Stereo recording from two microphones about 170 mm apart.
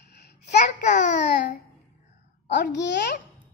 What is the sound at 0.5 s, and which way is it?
Speech, 45° left (ahead or behind).